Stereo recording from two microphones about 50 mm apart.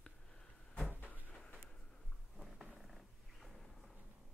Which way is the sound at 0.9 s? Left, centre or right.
Left.